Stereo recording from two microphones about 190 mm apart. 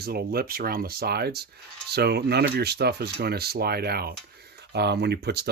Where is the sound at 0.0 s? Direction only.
55° right (ahead or behind).